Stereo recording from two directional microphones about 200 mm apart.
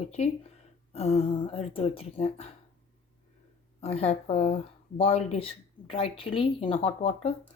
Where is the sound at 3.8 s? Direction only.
30° left (ahead or behind).